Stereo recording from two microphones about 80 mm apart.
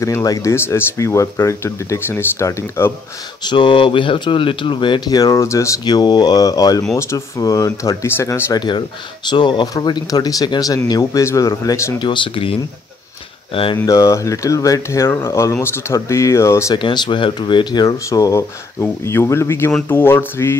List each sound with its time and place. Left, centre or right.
0.0 s speech: left
3.4 s speech: left
5.0 s speech: left
5.9 s speech: left
7.0 s speech: left
8.5 s speech: left
10.9 s speech: left
12.0 s speech: left
13.8 s speech: left
15.0 s speech: left
16.7 s speech: left
18.8 s speech: left